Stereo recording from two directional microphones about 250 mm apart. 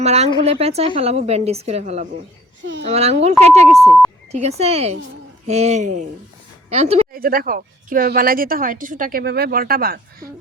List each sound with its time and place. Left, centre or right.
0.0 s a woman's voice: right
3.8 s speech: centre
4.3 s a woman's voice: right
7.1 s speech: right